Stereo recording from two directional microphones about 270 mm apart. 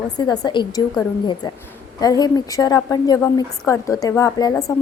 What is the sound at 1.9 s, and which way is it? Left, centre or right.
A woman's voice, centre.